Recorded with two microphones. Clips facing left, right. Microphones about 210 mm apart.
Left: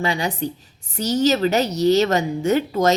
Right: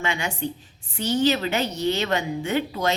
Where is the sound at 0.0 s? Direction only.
35° left (ahead or behind).